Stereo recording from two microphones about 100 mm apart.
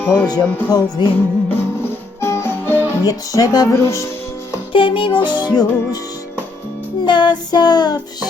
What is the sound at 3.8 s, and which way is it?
Speech, 30° left (ahead or behind).